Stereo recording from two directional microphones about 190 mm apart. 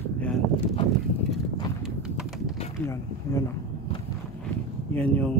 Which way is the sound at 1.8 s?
5° right (ahead or behind).